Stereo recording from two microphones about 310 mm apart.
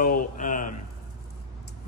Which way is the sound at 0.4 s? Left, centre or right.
Left.